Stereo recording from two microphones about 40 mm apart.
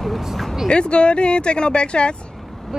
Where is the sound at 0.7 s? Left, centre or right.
Left.